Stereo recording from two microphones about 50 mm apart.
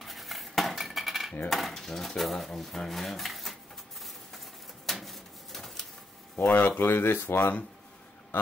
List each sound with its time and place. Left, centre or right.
0.0 s cutlery: centre
1.5 s speech: centre
4.8 s a sound: centre
6.3 s speech: left
6.8 s speech: left